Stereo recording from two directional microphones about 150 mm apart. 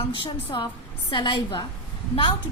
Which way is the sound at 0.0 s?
30° left (ahead or behind).